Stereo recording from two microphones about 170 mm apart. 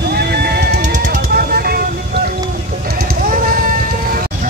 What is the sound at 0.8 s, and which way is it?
Music, 50° right (ahead or behind).